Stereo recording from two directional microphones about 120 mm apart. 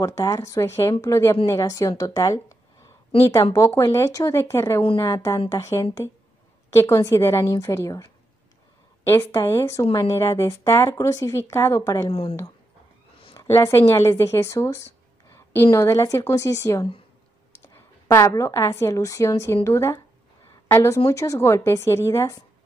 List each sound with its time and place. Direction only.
0.0 s a woman's voice: 30° left (ahead or behind)
3.5 s a woman's voice: 20° left (ahead or behind)
12.1 s speech: 50° left (ahead or behind)
13.6 s a woman's voice: 25° left (ahead or behind)